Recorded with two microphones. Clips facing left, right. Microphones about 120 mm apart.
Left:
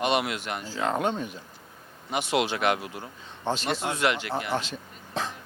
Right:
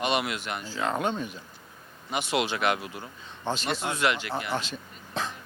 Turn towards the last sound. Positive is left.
turn(degrees=40)  # may be behind; listen again after turning